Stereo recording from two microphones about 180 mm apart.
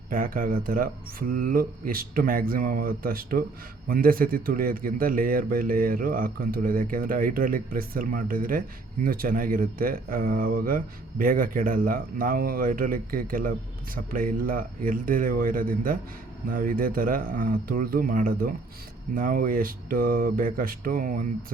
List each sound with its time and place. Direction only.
0.1 s a man's voice: 50° right (ahead or behind)